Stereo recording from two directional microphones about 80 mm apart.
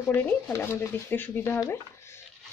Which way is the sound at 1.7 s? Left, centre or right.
Left.